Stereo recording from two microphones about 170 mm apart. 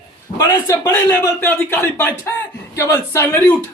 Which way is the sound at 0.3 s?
20° left (ahead or behind).